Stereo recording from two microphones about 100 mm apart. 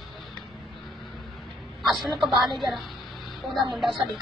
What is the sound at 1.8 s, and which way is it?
Speech, centre (ahead or behind).